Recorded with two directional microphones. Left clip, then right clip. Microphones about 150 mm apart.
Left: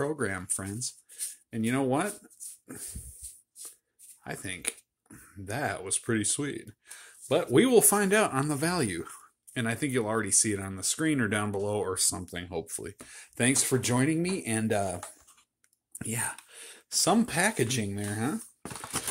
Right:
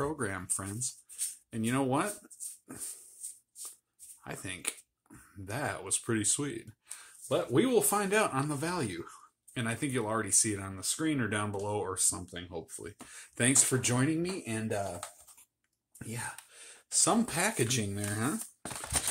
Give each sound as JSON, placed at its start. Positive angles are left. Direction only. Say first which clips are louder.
{"t": 0.0, "sound": "speech", "louder": "left 3 dB", "side_deg": 25}
{"t": 4.2, "sound": "speech", "louder": "left 3 dB", "side_deg": 25}
{"t": 7.2, "sound": "speech", "louder": "left 5 dB", "side_deg": 50}
{"t": 8.0, "sound": "speech", "louder": "left 4 dB", "side_deg": 35}
{"t": 13.1, "sound": "speech", "louder": "left 2 dB", "side_deg": 20}
{"t": 16.0, "sound": "a sound", "louder": "left 6 dB", "side_deg": 55}
{"t": 17.2, "sound": "speech", "louder": "left 4 dB", "side_deg": 25}